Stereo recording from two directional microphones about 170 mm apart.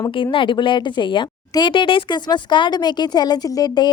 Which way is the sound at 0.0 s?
30° left (ahead or behind).